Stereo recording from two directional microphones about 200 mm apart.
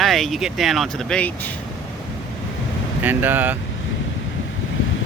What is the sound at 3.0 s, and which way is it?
Speech, 10° right (ahead or behind).